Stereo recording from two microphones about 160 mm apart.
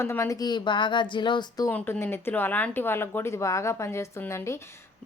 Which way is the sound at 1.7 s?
15° left (ahead or behind).